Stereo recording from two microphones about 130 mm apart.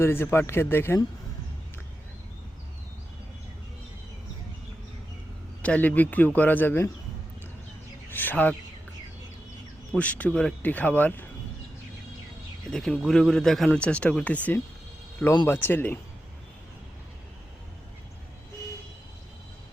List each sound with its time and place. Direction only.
0.0 s speech: 20° left (ahead or behind)
5.6 s speech: 10° left (ahead or behind)
8.1 s speech: 15° left (ahead or behind)
9.9 s speech: 10° left (ahead or behind)
12.7 s a man's voice: 5° left (ahead or behind)